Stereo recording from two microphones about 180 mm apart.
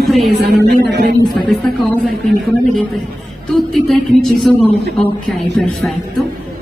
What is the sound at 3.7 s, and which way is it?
Music, centre (ahead or behind).